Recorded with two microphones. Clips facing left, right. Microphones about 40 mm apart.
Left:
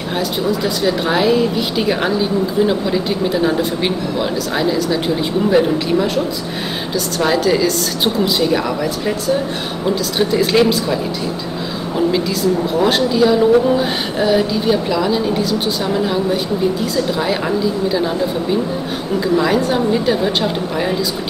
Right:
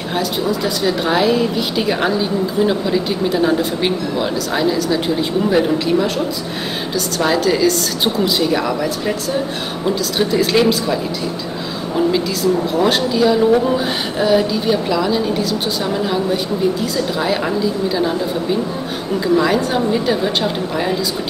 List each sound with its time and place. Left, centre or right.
0.1 s a woman's voice: centre
12.7 s a woman's voice: centre